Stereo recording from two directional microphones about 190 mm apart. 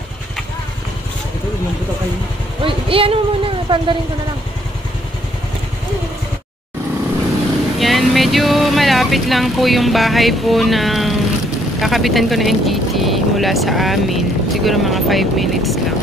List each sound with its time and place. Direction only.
2.6 s speech: 30° right (ahead or behind)
7.8 s a sound: centre (ahead or behind)
11.8 s speech: centre (ahead or behind)